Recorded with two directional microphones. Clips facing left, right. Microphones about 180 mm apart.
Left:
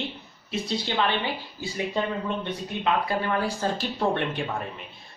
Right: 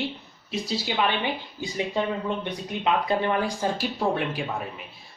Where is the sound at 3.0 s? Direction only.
20° right (ahead or behind).